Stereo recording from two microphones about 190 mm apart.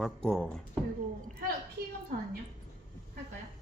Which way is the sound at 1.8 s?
55° right (ahead or behind).